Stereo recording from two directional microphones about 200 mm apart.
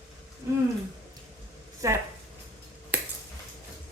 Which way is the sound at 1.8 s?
15° right (ahead or behind).